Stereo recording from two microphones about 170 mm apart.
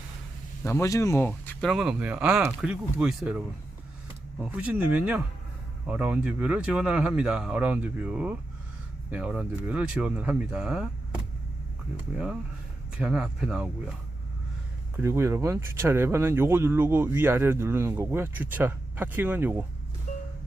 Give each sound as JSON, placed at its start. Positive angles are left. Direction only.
{"t": 0.6, "sound": "speech", "side_deg": 15}
{"t": 1.3, "sound": "speech", "side_deg": 0}
{"t": 4.5, "sound": "speech", "side_deg": -10}
{"t": 14.9, "sound": "speech", "side_deg": -15}